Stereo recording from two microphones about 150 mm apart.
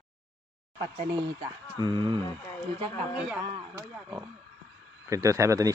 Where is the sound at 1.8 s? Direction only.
30° right (ahead or behind).